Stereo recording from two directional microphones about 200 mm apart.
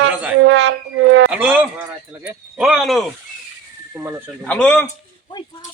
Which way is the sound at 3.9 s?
10° right (ahead or behind).